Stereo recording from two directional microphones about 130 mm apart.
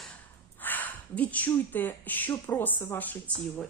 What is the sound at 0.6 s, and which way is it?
A woman's voice, 15° left (ahead or behind).